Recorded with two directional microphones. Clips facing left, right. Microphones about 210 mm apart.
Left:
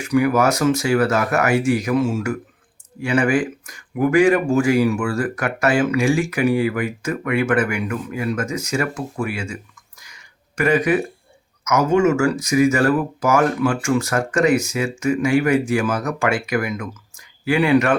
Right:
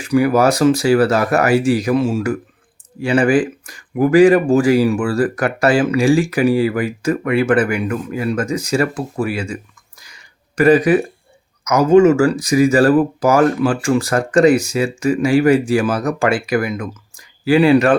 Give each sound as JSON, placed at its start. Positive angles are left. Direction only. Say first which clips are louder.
{"t": 0.0, "sound": "speech", "louder": "right 3 dB", "side_deg": -30}
{"t": 10.0, "sound": "a sound", "louder": "right 4 dB", "side_deg": -35}
{"t": 11.6, "sound": "speech", "louder": "right 6 dB", "side_deg": -35}